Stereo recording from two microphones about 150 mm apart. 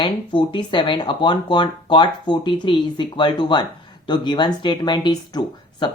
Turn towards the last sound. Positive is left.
turn(degrees=30)  # may be behind; listen again after turning